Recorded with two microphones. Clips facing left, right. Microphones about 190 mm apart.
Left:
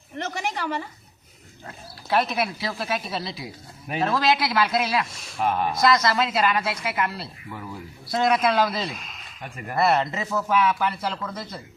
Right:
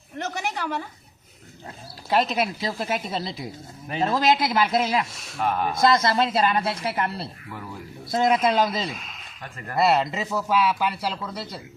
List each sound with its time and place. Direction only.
0.2 s a sound: centre (ahead or behind)
1.6 s speech: 20° right (ahead or behind)
5.1 s speech: centre (ahead or behind)
5.8 s speech: 25° right (ahead or behind)
8.1 s speech: 20° right (ahead or behind)
8.9 s speech: centre (ahead or behind)
9.4 s speech: 15° left (ahead or behind)
9.7 s speech: 10° right (ahead or behind)